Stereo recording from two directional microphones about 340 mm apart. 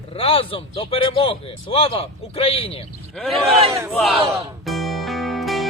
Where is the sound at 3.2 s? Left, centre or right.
Centre.